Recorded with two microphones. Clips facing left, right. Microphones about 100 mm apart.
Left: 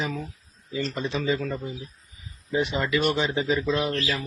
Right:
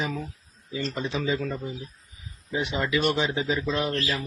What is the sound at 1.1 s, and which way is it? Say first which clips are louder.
Speech: left 1 dB; 15° right (ahead or behind).